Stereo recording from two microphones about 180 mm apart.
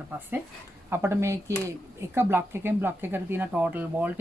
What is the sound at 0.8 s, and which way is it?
Speech, 15° right (ahead or behind).